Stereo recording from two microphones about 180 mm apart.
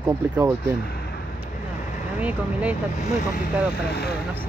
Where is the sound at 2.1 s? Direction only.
10° right (ahead or behind).